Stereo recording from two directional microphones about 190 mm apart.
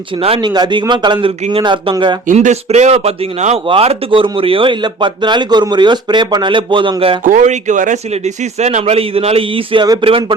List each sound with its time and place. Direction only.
0.2 s speech: 30° right (ahead or behind)
2.2 s speech: 40° right (ahead or behind)
7.3 s a man's voice: 40° right (ahead or behind)